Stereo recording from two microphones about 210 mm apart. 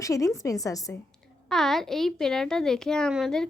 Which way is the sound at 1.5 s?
Centre (ahead or behind).